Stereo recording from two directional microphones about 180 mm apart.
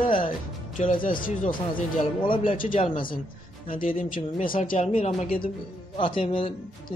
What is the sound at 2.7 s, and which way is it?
Speech, 25° left (ahead or behind).